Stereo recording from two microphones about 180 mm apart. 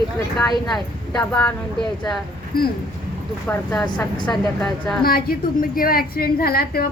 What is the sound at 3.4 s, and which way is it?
A woman's voice, 10° left (ahead or behind).